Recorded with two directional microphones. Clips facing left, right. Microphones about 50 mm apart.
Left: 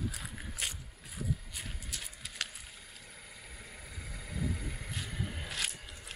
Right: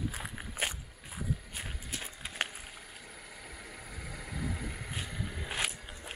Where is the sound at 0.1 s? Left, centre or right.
Right.